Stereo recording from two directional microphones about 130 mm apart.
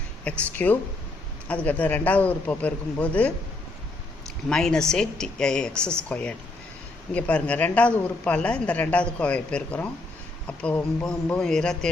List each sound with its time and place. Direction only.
0.3 s speech: 10° left (ahead or behind)
4.4 s speech: 5° left (ahead or behind)